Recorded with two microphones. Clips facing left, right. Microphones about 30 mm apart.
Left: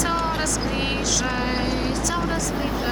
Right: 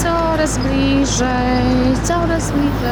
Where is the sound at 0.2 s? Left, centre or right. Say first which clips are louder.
Right 8 dB; centre.